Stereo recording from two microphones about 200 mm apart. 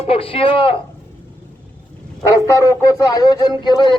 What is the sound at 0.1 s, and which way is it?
Speech, 30° left (ahead or behind).